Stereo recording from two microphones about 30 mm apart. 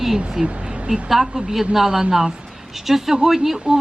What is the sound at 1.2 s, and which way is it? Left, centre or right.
Speech, right.